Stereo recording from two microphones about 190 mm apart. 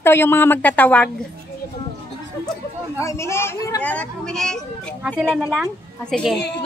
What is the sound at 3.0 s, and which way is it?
A woman's voice, 15° left (ahead or behind).